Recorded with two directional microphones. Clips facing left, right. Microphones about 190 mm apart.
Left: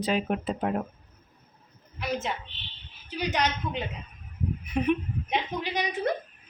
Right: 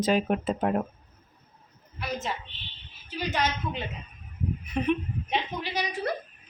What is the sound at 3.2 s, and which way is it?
A woman's voice, 15° left (ahead or behind).